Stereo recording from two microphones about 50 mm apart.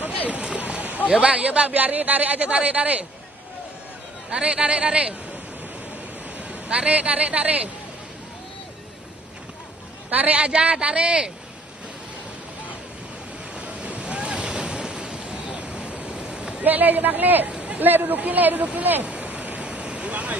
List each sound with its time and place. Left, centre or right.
0.3 s a sound: right
1.2 s speech: right
4.3 s speech: right
6.3 s speech: right
10.0 s speech: right
13.6 s waves: right
15.5 s a sound: right
16.6 s speech: right
17.5 s a sound: right
17.7 s speech: right
19.0 s waterfall: right